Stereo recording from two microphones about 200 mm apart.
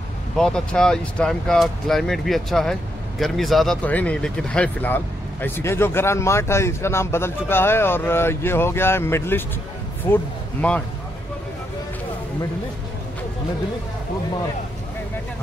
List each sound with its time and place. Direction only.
0.4 s speech: 5° left (ahead or behind)